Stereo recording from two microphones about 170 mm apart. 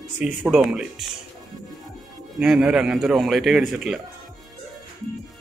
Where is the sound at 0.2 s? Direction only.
5° right (ahead or behind).